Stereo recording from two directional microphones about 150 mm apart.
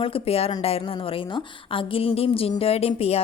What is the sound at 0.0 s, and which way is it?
A woman's voice, 40° left (ahead or behind).